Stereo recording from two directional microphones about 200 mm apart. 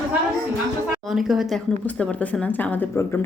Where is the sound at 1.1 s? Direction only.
Centre (ahead or behind).